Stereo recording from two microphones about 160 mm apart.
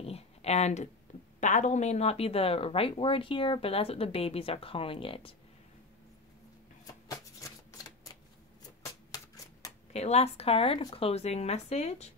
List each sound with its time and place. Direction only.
0.0 s a sound: 40° left (ahead or behind)
1.4 s speech: 50° left (ahead or behind)
7.1 s shuffling cards: 20° left (ahead or behind)
8.8 s typewriter: 20° left (ahead or behind)
9.9 s speech: 40° left (ahead or behind)